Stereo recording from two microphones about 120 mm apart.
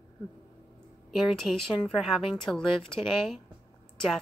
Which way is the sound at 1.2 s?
Centre (ahead or behind).